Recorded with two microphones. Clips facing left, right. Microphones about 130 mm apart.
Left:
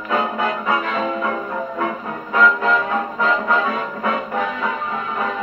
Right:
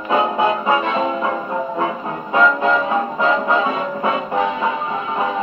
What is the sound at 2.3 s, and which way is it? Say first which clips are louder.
Music: right 1 dB; 25° right (ahead or behind).